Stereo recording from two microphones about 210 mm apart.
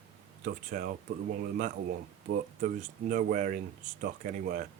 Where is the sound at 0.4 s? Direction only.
40° right (ahead or behind).